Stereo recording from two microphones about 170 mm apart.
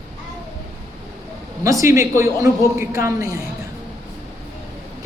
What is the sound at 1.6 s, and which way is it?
A woman's voice, 20° right (ahead or behind).